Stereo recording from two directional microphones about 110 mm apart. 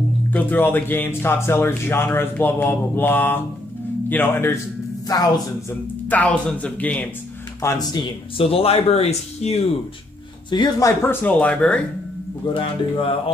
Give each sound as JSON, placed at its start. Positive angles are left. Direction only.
{"t": 0.3, "sound": "speech", "side_deg": 15}
{"t": 5.0, "sound": "speech", "side_deg": 35}
{"t": 5.7, "sound": "speech", "side_deg": 15}
{"t": 7.6, "sound": "speech", "side_deg": 25}
{"t": 8.4, "sound": "speech", "side_deg": 60}
{"t": 10.5, "sound": "speech", "side_deg": 40}
{"t": 11.0, "sound": "speech", "side_deg": 20}
{"t": 11.3, "sound": "speech", "side_deg": 10}
{"t": 12.5, "sound": "speech", "side_deg": 50}